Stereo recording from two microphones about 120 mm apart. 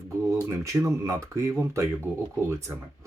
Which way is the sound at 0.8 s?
25° right (ahead or behind).